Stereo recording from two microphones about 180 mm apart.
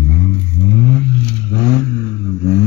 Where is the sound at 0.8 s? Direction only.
10° left (ahead or behind).